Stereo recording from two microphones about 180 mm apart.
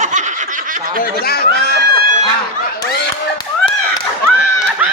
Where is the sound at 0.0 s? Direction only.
40° right (ahead or behind).